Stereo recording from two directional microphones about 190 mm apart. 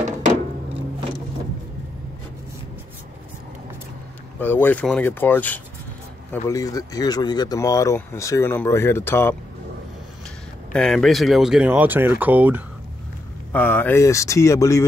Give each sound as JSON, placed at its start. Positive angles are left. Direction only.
{"t": 4.4, "sound": "speech", "side_deg": 10}
{"t": 10.7, "sound": "speech", "side_deg": 5}
{"t": 13.5, "sound": "speech", "side_deg": 10}